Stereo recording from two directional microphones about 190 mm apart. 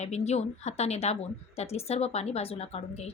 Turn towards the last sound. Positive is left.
turn(degrees=35)  # may be behind; listen again after turning